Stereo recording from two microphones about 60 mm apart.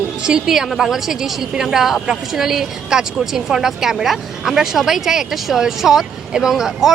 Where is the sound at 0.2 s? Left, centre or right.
Centre.